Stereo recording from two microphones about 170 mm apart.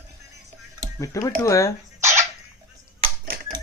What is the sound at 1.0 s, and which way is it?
Speech, 20° left (ahead or behind).